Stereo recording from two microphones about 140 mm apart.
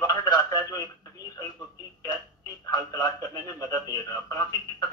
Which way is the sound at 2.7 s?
25° left (ahead or behind).